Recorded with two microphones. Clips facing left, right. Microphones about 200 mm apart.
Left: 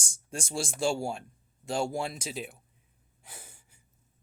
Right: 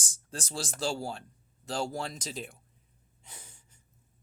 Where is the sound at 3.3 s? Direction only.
5° left (ahead or behind).